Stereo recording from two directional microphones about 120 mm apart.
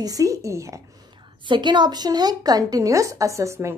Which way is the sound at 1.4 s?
40° right (ahead or behind).